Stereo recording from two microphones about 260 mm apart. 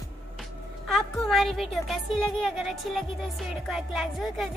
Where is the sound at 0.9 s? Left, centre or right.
Centre.